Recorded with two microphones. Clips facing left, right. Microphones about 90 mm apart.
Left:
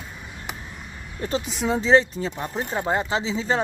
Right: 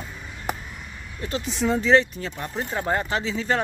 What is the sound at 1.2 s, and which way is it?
Speech, 30° left (ahead or behind).